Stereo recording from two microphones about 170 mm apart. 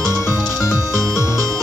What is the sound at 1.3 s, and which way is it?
Music, 20° right (ahead or behind).